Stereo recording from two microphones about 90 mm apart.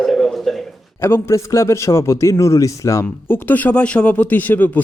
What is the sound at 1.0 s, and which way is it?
A man's voice, 30° left (ahead or behind).